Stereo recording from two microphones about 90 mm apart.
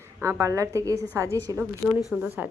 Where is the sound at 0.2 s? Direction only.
35° right (ahead or behind).